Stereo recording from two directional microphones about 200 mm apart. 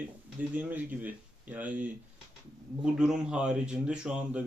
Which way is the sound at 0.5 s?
10° right (ahead or behind).